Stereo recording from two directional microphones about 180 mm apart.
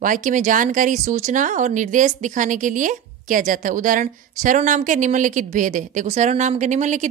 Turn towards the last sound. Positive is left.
turn(degrees=-40)  # may be behind; listen again after turning